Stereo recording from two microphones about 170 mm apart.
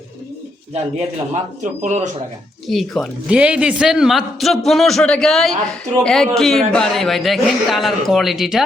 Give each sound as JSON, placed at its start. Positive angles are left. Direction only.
{"t": 0.7, "sound": "speech", "side_deg": -40}
{"t": 2.6, "sound": "a man's voice", "side_deg": 0}